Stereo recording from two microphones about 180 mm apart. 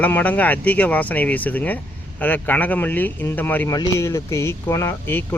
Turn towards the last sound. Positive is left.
turn(degrees=15)  # may be behind; listen again after turning